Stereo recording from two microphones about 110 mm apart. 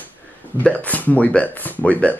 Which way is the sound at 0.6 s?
15° left (ahead or behind).